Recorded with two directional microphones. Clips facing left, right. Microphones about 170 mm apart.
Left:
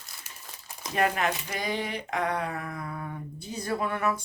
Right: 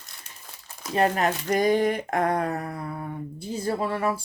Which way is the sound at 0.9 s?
40° right (ahead or behind).